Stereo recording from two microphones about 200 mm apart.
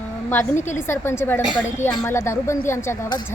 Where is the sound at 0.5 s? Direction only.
35° left (ahead or behind).